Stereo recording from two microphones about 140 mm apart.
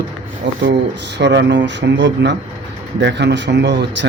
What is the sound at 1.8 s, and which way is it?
Speech, 90° right.